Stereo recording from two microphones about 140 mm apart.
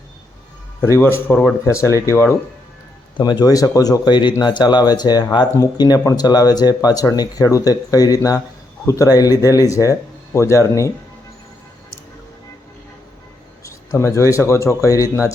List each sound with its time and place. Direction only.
0.8 s speech: 20° left (ahead or behind)
3.2 s speech: 30° left (ahead or behind)
13.9 s speech: 20° left (ahead or behind)